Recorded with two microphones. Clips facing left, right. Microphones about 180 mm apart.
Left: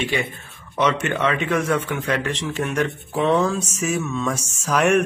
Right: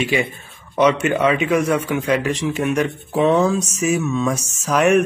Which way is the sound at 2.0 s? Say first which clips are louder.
Right 5 dB; 10° right (ahead or behind).